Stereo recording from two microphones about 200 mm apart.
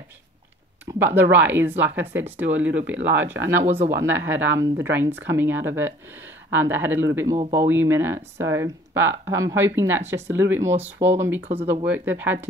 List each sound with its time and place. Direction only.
0.8 s speech: 10° right (ahead or behind)
3.0 s speech: 65° right (ahead or behind)
3.6 s speech: 35° right (ahead or behind)
4.0 s speech: 10° right (ahead or behind)